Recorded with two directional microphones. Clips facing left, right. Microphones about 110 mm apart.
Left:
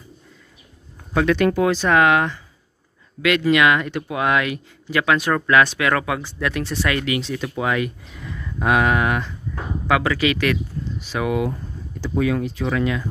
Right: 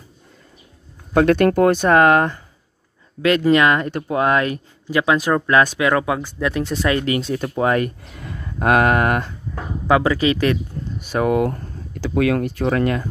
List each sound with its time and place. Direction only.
1.1 s speech: 50° right (ahead or behind); by 7.2 s 30° right (ahead or behind)
7.2 s speech: 45° right (ahead or behind)
9.8 s speech: 30° right (ahead or behind)
11.1 s speech: 45° right (ahead or behind)